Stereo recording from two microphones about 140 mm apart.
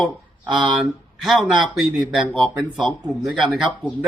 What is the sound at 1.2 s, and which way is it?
Speech, centre (ahead or behind).